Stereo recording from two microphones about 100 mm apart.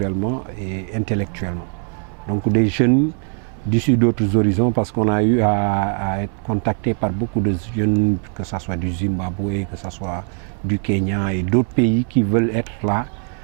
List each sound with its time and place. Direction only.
0.0 s speech: 20° right (ahead or behind)